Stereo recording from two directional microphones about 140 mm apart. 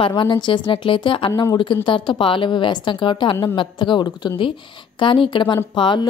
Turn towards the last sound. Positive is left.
turn(degrees=35)  # may be behind; listen again after turning